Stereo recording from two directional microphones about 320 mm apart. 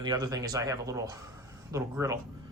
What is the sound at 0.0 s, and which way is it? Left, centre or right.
Speech, centre.